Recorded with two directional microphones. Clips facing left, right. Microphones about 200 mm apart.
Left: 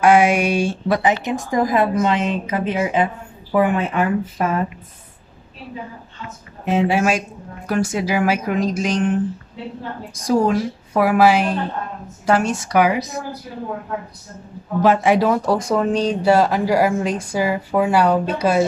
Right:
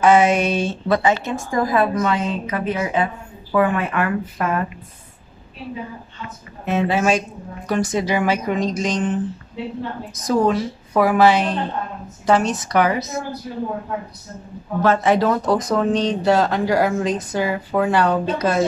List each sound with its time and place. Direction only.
0.0 s speech: 10° left (ahead or behind)
6.6 s speech: 15° left (ahead or behind)
14.8 s speech: 15° left (ahead or behind)